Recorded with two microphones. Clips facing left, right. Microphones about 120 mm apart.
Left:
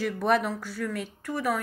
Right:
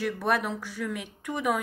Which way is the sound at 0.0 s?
5° right (ahead or behind).